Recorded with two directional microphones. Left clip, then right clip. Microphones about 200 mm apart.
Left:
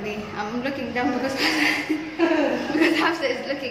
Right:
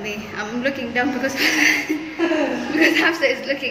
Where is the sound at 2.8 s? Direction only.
5° left (ahead or behind).